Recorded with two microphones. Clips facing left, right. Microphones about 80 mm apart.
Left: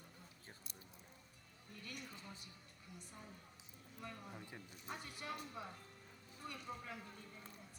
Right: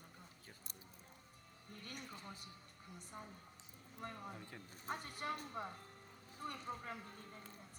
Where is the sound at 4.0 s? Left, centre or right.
Right.